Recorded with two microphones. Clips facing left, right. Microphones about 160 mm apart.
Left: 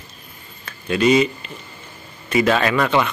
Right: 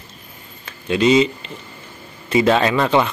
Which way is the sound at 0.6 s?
20° right (ahead or behind).